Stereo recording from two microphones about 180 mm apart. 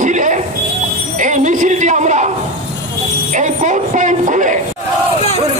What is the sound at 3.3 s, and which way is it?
A woman's voice, 40° right (ahead or behind).